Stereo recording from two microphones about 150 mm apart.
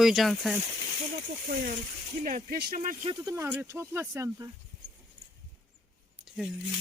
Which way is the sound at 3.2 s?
20° right (ahead or behind).